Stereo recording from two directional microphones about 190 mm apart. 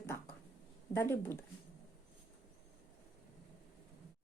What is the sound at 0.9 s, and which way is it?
Speech, 15° left (ahead or behind).